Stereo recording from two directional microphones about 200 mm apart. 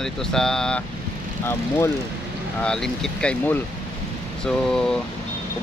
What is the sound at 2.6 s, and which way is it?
Speech, 5° left (ahead or behind).